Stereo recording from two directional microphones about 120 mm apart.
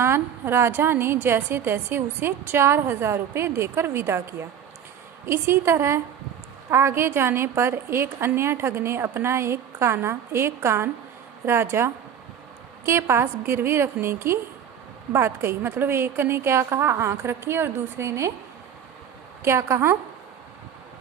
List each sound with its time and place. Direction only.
0.0 s a woman's voice: 20° right (ahead or behind)
19.4 s a woman's voice: 25° right (ahead or behind)